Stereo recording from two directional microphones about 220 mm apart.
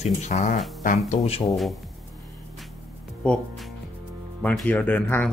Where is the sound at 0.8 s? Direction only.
30° left (ahead or behind).